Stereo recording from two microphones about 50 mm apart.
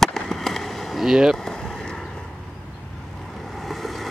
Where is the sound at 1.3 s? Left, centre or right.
Centre.